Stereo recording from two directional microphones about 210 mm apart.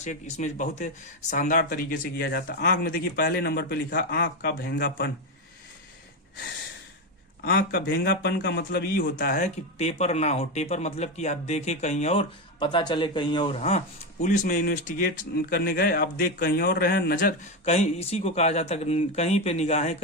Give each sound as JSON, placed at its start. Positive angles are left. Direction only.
{"t": 0.0, "sound": "speech", "side_deg": 35}
{"t": 7.4, "sound": "speech", "side_deg": 50}
{"t": 13.6, "sound": "speech", "side_deg": 30}